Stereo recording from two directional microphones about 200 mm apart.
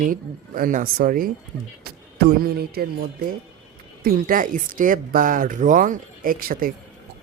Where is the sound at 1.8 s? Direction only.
50° right (ahead or behind).